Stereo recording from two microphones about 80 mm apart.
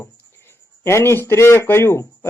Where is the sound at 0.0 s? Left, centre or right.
Left.